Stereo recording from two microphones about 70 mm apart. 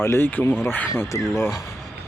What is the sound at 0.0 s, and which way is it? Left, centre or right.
Speech, left.